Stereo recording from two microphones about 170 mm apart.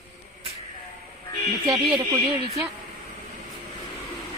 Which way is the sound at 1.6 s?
25° right (ahead or behind).